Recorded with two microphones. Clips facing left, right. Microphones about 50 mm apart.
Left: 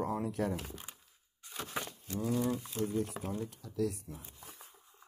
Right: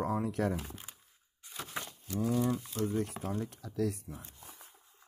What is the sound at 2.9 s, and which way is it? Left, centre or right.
Speech, right.